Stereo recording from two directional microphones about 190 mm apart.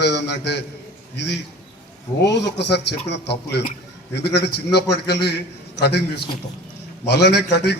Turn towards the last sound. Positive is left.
turn(degrees=60)  # may be behind; listen again after turning